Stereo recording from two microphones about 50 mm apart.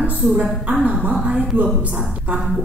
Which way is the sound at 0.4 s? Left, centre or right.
Right.